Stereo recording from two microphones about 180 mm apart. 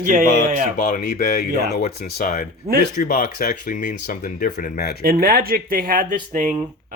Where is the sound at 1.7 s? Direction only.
55° left (ahead or behind).